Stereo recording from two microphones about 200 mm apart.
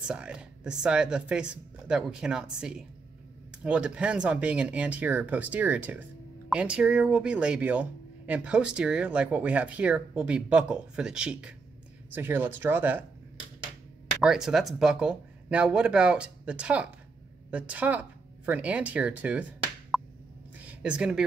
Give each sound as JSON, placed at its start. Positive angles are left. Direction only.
{"t": 0.0, "sound": "speech", "side_deg": -5}
{"t": 14.2, "sound": "speech", "side_deg": 0}
{"t": 19.9, "sound": "plop", "side_deg": 0}
{"t": 20.5, "sound": "a sound", "side_deg": -5}